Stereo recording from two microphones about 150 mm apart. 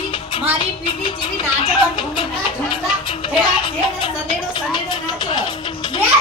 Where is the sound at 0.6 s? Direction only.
35° left (ahead or behind).